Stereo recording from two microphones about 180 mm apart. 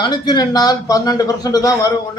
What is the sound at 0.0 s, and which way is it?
Speech, 25° left (ahead or behind).